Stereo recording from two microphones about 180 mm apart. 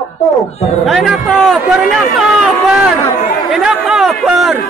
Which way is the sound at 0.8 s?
Centre (ahead or behind).